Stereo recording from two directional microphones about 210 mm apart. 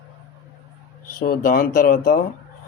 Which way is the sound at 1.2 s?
45° left (ahead or behind).